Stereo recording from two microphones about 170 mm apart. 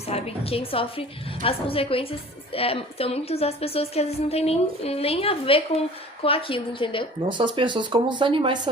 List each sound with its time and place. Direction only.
0.1 s a woman's voice: 35° left (ahead or behind)
7.3 s speech: 30° right (ahead or behind)